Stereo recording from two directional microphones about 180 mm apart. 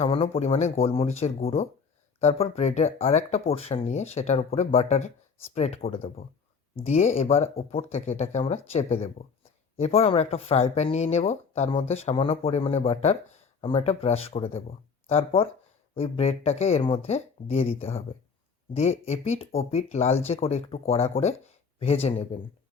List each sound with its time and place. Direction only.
0.0 s speech: 35° left (ahead or behind)